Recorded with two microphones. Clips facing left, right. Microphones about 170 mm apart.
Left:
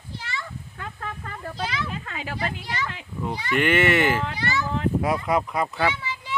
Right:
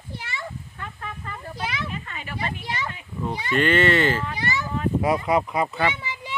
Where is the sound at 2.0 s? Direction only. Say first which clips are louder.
Left 1 dB; 90° left.